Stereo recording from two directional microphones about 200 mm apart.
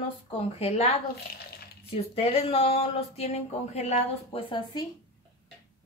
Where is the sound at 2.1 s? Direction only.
30° left (ahead or behind).